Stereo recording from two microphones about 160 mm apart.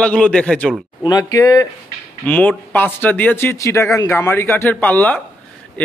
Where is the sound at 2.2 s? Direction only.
10° left (ahead or behind).